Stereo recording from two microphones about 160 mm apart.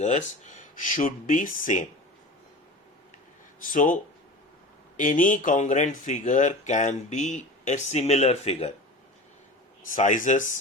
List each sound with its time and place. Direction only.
0.0 s speech: 50° left (ahead or behind)
3.7 s speech: 55° left (ahead or behind)
4.9 s speech: 55° left (ahead or behind)
9.8 s speech: 55° left (ahead or behind)